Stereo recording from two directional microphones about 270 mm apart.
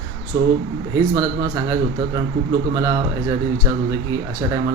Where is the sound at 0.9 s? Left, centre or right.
Centre.